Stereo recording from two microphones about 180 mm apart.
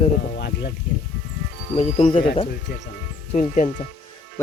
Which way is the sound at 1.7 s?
35° left (ahead or behind).